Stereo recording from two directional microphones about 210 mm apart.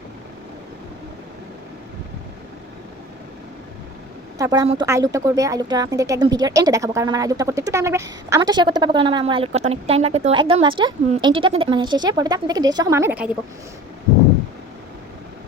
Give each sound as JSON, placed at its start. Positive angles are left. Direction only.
{"t": 4.4, "sound": "a woman's voice", "side_deg": -15}